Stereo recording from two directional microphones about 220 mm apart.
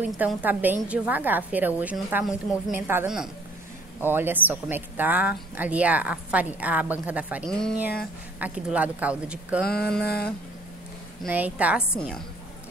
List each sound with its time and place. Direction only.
0.2 s a woman's voice: 10° right (ahead or behind)
10.0 s a sound: 45° left (ahead or behind)
11.2 s speech: 5° right (ahead or behind)